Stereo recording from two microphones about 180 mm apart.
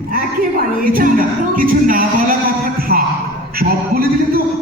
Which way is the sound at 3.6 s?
55° right (ahead or behind).